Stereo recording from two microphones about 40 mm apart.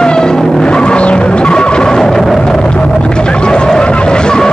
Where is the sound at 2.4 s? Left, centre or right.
Centre.